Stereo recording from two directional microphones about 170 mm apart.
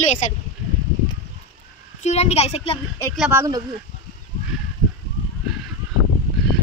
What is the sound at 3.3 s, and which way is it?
Speech, 15° right (ahead or behind).